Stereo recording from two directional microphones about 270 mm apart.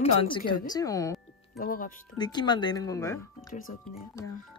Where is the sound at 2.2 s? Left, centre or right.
Centre.